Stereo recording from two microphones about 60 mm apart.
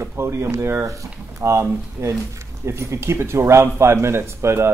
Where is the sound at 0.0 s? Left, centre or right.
Right.